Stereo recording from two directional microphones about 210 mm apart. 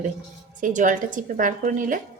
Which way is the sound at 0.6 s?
40° right (ahead or behind).